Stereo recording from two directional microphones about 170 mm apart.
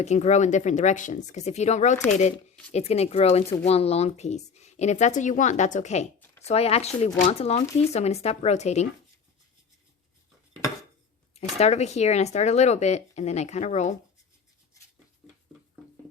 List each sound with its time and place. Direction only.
0.0 s speech: 40° left (ahead or behind)
11.3 s speech: 40° left (ahead or behind)